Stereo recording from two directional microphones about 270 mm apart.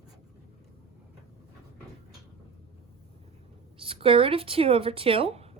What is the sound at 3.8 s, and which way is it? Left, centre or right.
Speech, centre.